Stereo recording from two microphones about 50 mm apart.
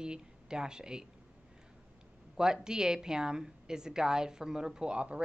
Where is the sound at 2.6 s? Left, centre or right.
Centre.